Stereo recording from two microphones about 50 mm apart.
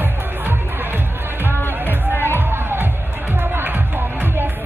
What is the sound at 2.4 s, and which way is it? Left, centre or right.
Music, right.